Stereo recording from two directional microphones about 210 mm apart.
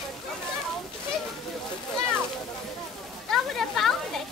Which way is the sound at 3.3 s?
Centre (ahead or behind).